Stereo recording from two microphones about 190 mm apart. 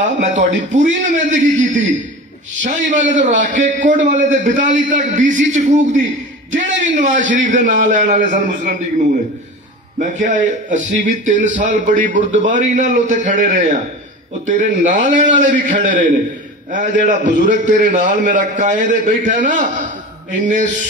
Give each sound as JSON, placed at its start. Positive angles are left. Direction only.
{"t": 0.0, "sound": "a man's voice", "side_deg": -40}
{"t": 9.9, "sound": "a man's voice", "side_deg": -40}